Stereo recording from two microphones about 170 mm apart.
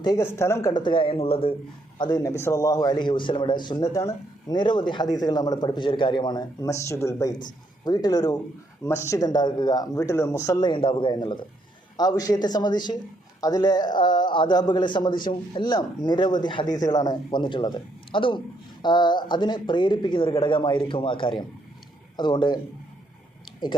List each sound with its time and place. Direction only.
0.0 s a man's voice: 20° left (ahead or behind)
2.0 s a man's voice: 25° left (ahead or behind)
23.5 s a sound: 25° left (ahead or behind)